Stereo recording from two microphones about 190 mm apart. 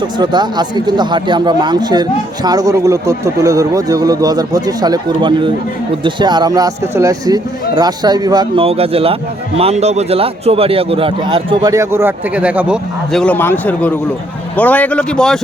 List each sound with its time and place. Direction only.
0.2 s speech: 20° right (ahead or behind); by 13.2 s 5° right (ahead or behind)
13.2 s speech: 10° left (ahead or behind)